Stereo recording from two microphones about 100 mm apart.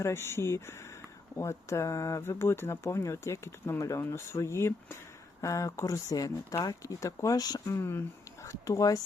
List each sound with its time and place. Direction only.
0.0 s speech: 25° left (ahead or behind)
7.8 s speech: 25° left (ahead or behind)